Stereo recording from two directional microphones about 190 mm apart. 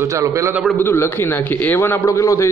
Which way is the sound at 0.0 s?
15° right (ahead or behind).